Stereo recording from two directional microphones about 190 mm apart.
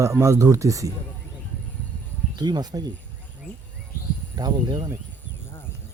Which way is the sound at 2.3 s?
20° right (ahead or behind).